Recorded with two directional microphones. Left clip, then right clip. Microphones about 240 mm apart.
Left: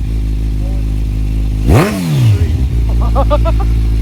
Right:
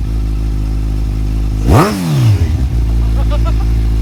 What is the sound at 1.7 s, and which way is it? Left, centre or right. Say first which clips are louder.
Vehicle: right 1 dB; centre.